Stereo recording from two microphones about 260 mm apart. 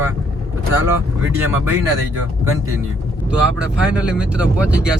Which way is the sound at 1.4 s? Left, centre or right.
Centre.